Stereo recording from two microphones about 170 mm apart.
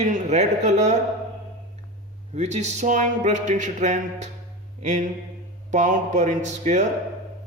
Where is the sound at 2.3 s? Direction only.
40° right (ahead or behind).